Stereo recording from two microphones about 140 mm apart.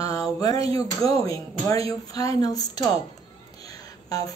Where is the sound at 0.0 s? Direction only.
25° left (ahead or behind).